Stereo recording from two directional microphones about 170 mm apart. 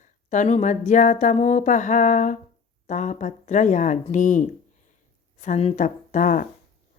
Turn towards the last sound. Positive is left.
turn(degrees=50)  # may be behind; listen again after turning